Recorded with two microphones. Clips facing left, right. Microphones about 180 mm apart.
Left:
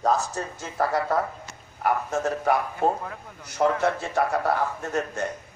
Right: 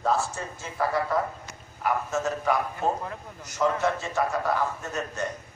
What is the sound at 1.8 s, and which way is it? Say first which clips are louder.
A man's voice: left 2 dB; 55° left (ahead or behind).